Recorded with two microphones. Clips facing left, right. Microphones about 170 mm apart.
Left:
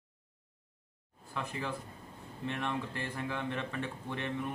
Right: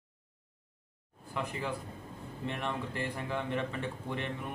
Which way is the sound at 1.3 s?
15° right (ahead or behind).